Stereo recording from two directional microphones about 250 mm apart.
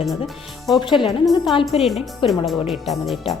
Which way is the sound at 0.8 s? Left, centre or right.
Centre.